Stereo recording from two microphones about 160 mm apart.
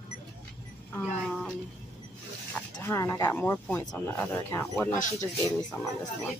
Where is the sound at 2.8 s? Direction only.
15° left (ahead or behind).